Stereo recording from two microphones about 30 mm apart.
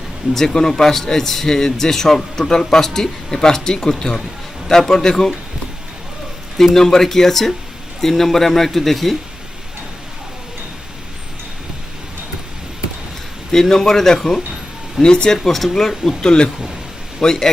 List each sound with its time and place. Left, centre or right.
0.3 s a man's voice: centre
6.7 s a man's voice: centre
13.5 s a man's voice: centre
15.0 s speech: left
15.4 s a man's voice: centre
16.2 s speech: left
17.2 s a man's voice: centre